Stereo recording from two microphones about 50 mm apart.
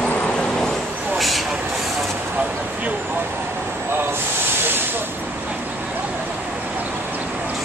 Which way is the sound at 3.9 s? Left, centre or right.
Right.